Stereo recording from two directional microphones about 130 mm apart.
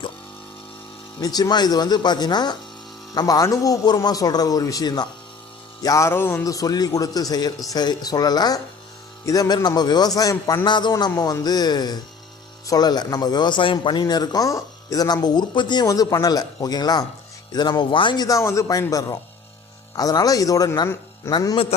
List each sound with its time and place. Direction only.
1.2 s a man's voice: 30° left (ahead or behind)
10.9 s a man's voice: 25° left (ahead or behind)
21.5 s a man's voice: 45° left (ahead or behind)